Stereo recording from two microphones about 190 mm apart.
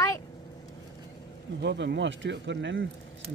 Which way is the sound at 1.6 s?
65° right (ahead or behind).